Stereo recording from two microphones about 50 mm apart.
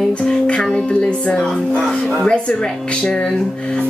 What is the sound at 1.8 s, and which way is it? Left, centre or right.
Speech, centre.